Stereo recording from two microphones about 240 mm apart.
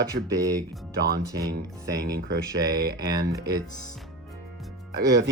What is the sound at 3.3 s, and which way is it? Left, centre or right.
Speech, centre.